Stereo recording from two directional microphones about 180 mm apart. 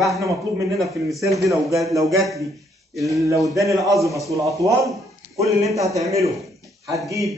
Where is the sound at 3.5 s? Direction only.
20° right (ahead or behind).